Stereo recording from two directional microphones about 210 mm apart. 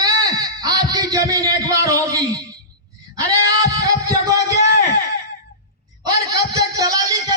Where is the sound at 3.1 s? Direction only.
15° right (ahead or behind).